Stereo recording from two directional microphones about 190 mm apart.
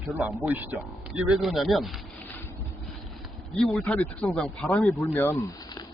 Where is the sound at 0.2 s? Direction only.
10° right (ahead or behind).